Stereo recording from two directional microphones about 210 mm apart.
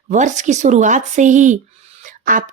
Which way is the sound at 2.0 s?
40° right (ahead or behind).